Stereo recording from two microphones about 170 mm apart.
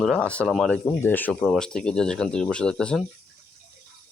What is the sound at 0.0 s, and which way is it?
Speech, 5° left (ahead or behind).